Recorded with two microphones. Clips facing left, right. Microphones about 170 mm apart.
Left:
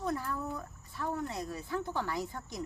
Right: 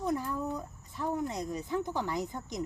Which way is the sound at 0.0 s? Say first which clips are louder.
Right 3 dB; 15° right (ahead or behind).